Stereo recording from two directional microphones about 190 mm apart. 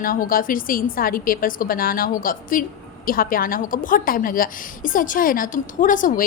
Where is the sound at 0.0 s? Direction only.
50° left (ahead or behind).